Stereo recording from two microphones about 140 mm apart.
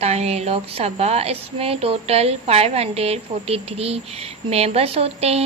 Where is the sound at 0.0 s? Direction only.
50° right (ahead or behind).